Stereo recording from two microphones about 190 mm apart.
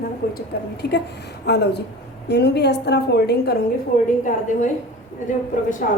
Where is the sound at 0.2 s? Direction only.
50° left (ahead or behind).